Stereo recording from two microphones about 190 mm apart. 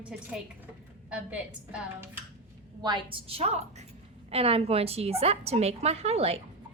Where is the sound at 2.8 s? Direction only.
25° right (ahead or behind).